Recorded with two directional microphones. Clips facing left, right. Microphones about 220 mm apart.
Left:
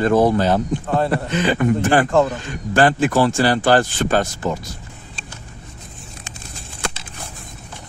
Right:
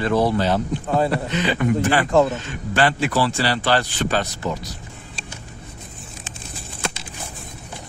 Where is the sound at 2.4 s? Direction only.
45° left (ahead or behind).